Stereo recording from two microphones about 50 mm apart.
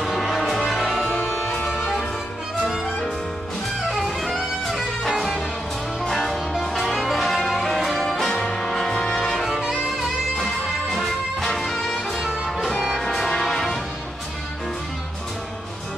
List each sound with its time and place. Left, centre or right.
0.0 s music: centre
1.1 s music: left
1.7 s music: centre
3.9 s music: centre
12.2 s music: centre
13.0 s music: centre